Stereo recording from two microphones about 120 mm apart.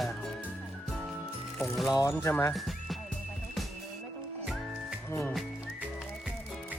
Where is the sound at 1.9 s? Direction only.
25° left (ahead or behind).